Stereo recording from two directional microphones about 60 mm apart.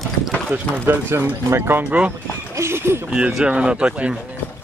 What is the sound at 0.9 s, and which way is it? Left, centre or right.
Speech, right.